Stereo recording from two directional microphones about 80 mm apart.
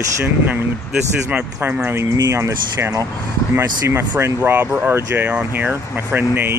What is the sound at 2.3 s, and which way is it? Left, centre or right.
Speech, right.